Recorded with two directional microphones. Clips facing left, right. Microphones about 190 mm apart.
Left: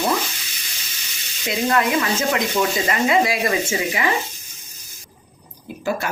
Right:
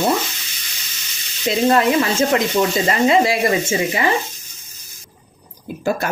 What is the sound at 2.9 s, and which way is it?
Speech, 30° right (ahead or behind).